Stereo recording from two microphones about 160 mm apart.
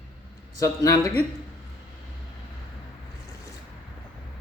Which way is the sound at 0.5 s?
20° left (ahead or behind).